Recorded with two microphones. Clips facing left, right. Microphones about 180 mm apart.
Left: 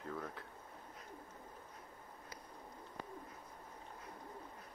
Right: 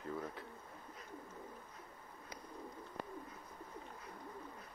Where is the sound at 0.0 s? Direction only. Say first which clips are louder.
Right 2 dB; 5° right (ahead or behind).